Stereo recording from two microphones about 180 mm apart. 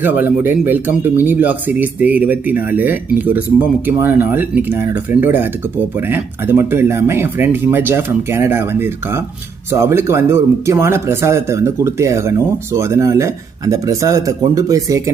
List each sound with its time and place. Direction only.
0.0 s speech: 10° right (ahead or behind)